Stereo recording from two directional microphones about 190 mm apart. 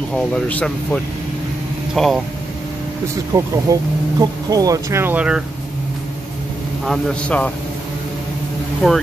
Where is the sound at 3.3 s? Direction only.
20° right (ahead or behind).